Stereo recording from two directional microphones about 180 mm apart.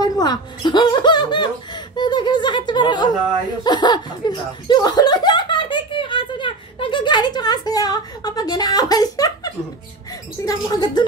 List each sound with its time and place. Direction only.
0.0 s speech: 25° left (ahead or behind)